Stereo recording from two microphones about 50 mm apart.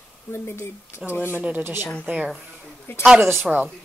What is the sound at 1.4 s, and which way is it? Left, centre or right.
Speech, right.